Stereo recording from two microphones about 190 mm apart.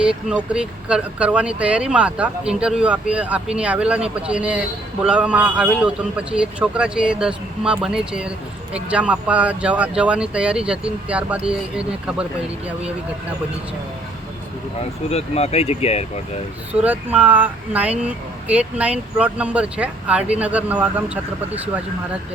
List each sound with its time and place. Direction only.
0.0 s speech: 5° right (ahead or behind)
15.1 s speech: 35° left (ahead or behind)
16.8 s speech: 10° right (ahead or behind)